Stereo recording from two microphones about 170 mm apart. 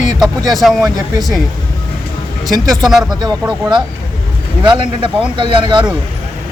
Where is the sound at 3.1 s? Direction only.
25° right (ahead or behind).